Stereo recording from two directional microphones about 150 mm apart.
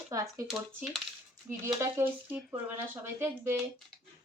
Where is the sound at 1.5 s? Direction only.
15° right (ahead or behind).